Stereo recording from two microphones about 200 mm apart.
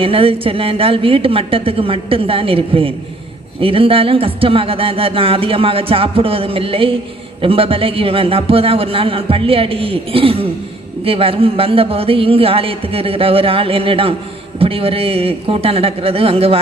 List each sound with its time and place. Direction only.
0.0 s speech: 25° right (ahead or behind)